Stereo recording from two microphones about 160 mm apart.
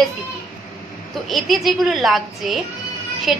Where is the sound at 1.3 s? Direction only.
Centre (ahead or behind).